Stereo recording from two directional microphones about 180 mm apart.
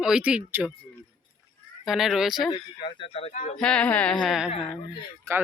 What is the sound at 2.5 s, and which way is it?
Speech, 30° left (ahead or behind).